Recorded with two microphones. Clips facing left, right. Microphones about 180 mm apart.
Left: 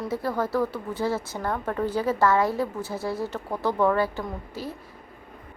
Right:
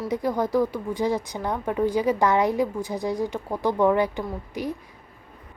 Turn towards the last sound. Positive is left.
turn(degrees=-15)  # may be behind; listen again after turning